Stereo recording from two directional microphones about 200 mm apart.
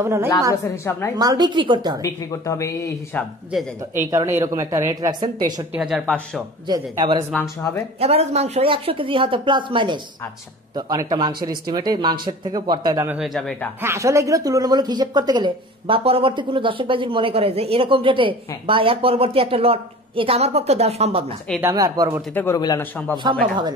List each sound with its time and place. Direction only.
0.0 s a woman's voice: 15° right (ahead or behind)
2.0 s speech: 15° left (ahead or behind)
4.1 s a woman's voice: 15° right (ahead or behind)
5.7 s speech: centre (ahead or behind)
6.7 s speech: 20° right (ahead or behind)
8.0 s speech: 30° right (ahead or behind); by 13.7 s centre (ahead or behind)
13.7 s speech: 15° right (ahead or behind); by 21.3 s 30° right (ahead or behind)
21.5 s a woman's voice: 15° right (ahead or behind)
22.3 s a man's voice: 10° left (ahead or behind)
23.3 s speech: 20° right (ahead or behind)